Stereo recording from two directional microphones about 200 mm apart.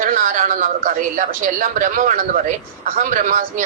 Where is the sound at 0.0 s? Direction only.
40° right (ahead or behind).